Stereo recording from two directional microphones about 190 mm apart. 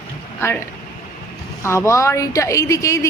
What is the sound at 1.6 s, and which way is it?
Speech, 15° left (ahead or behind).